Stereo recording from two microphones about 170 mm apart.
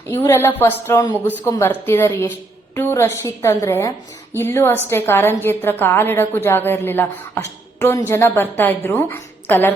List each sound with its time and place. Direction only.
0.1 s a woman's voice: 15° left (ahead or behind)